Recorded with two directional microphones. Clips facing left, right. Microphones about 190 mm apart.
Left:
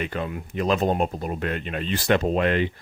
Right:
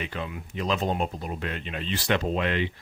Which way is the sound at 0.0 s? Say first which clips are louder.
Left 5 dB; 50° left (ahead or behind).